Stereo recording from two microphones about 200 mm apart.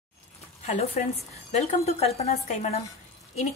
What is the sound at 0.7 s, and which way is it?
A woman's voice, 35° left (ahead or behind).